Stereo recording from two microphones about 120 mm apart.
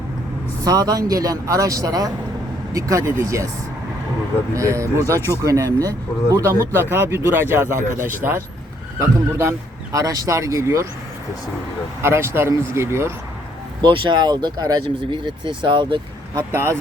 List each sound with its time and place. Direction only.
0.6 s a man's voice: 30° right (ahead or behind)
4.5 s a man's voice: 25° right (ahead or behind)
9.0 s a man's voice: 20° right (ahead or behind)
12.0 s a man's voice: 20° right (ahead or behind)
13.8 s speech: 40° right (ahead or behind)
16.5 s a man's voice: 20° right (ahead or behind)